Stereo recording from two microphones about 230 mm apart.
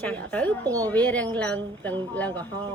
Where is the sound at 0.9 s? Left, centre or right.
Centre.